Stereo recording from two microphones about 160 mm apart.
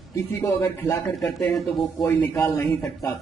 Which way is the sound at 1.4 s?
Centre (ahead or behind).